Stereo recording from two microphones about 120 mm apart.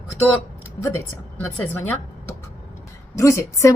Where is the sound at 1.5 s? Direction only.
15° left (ahead or behind).